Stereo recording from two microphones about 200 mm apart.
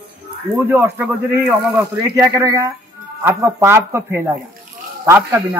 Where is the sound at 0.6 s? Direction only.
10° right (ahead or behind).